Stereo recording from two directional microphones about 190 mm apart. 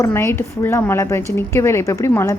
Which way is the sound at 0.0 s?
15° left (ahead or behind).